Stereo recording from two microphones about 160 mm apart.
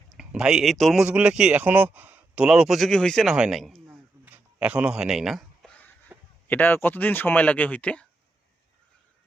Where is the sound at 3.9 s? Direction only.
10° right (ahead or behind); by 5.9 s 5° left (ahead or behind).